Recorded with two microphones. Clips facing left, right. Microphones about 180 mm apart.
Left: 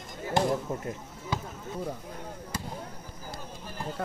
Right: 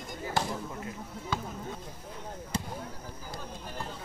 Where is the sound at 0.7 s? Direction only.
45° left (ahead or behind).